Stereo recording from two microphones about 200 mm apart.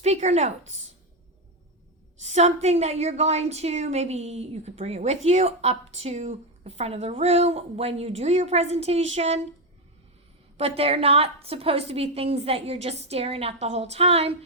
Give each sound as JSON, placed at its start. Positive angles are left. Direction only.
{"t": 0.0, "sound": "speech", "side_deg": -35}
{"t": 2.2, "sound": "speech", "side_deg": -35}
{"t": 10.6, "sound": "a woman's voice", "side_deg": -30}